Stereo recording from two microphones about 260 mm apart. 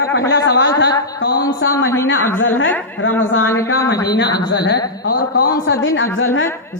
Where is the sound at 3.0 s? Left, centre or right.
Left.